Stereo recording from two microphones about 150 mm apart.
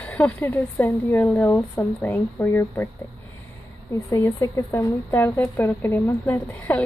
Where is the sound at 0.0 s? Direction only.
10° left (ahead or behind).